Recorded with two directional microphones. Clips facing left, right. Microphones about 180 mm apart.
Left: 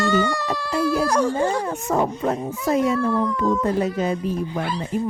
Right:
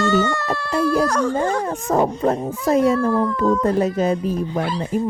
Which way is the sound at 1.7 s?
35° right (ahead or behind).